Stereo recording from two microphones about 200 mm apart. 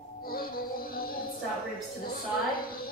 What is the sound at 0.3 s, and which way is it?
Music, 45° left (ahead or behind).